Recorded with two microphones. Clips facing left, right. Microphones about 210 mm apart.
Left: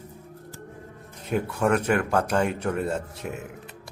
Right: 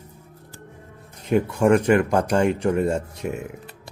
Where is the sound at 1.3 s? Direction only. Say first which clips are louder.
Right 6 dB; 5° right (ahead or behind).